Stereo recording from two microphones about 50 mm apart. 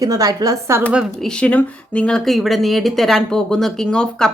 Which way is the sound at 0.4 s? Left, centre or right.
Right.